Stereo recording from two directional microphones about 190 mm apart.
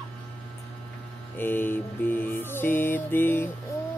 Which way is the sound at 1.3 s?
10° left (ahead or behind).